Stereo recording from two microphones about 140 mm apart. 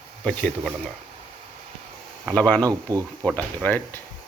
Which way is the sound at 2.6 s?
25° right (ahead or behind).